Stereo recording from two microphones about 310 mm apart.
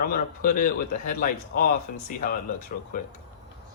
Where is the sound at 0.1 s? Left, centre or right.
Left.